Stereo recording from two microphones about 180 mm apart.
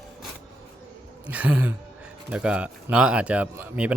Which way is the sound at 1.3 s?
10° right (ahead or behind).